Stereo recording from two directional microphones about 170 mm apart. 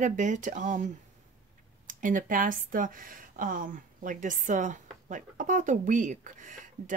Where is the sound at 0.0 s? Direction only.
45° right (ahead or behind).